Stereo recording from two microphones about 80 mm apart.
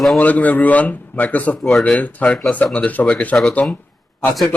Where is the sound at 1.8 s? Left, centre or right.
Centre.